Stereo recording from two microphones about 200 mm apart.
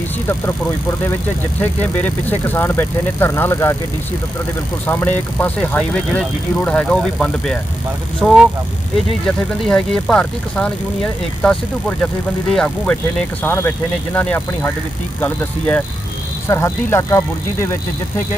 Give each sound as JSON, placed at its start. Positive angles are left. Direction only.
{"t": 0.3, "sound": "speech", "side_deg": 10}
{"t": 4.9, "sound": "speech", "side_deg": 10}